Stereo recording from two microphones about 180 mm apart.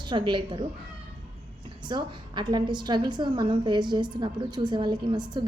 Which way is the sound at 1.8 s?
25° right (ahead or behind).